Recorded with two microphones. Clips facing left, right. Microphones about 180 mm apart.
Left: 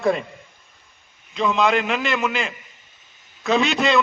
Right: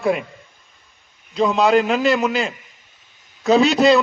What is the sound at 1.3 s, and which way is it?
A man's voice, 35° right (ahead or behind).